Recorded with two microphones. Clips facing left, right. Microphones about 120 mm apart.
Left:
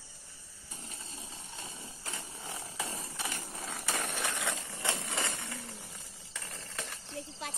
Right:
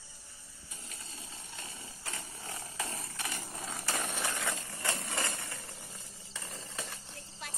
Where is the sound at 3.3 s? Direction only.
5° right (ahead or behind).